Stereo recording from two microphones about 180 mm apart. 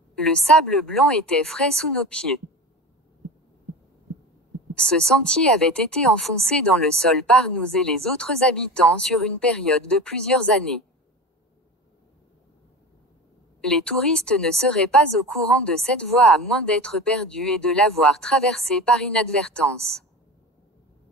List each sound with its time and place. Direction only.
0.1 s a woman's voice: 5° left (ahead or behind)
4.7 s a woman's voice: 5° left (ahead or behind)
13.6 s a woman's voice: 5° left (ahead or behind)